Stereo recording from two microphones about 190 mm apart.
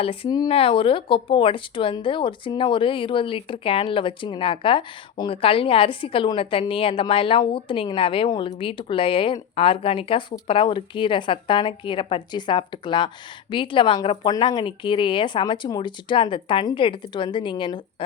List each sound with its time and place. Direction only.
0.0 s speech: 30° left (ahead or behind)